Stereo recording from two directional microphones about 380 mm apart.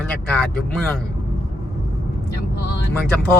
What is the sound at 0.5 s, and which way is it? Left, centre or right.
Speech, centre.